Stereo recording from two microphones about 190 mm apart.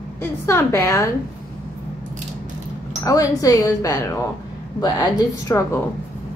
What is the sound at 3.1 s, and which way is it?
A woman's voice, 15° left (ahead or behind).